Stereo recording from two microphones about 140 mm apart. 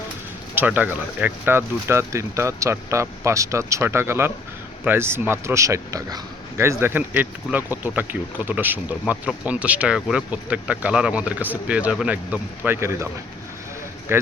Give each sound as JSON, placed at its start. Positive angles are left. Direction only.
{"t": 0.5, "sound": "speech", "side_deg": -10}
{"t": 14.1, "sound": "speech", "side_deg": -15}